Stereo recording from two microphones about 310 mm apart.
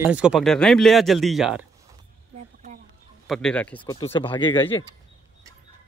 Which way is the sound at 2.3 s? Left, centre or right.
Right.